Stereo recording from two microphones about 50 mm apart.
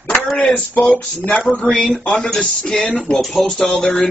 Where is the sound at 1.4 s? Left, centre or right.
Centre.